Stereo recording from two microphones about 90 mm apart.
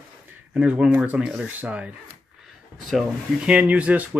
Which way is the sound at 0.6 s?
10° right (ahead or behind).